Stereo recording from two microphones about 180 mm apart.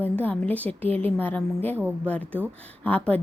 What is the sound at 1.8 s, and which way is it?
Speech, 10° right (ahead or behind).